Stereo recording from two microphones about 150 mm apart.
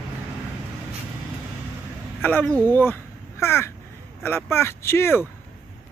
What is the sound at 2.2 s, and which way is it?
Speech, 10° left (ahead or behind).